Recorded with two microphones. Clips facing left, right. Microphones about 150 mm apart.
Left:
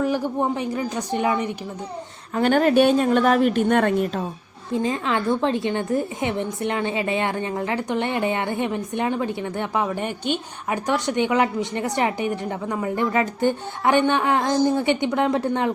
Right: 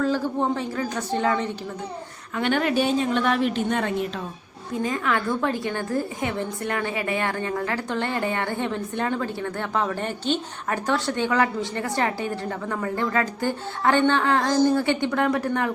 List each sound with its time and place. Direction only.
0.0 s a woman's voice: 15° left (ahead or behind)
2.3 s speech: 40° left (ahead or behind)
2.7 s a woman's voice: 55° left (ahead or behind)
4.7 s a woman's voice: 25° left (ahead or behind)